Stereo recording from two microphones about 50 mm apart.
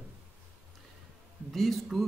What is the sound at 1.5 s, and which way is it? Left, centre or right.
Speech, centre.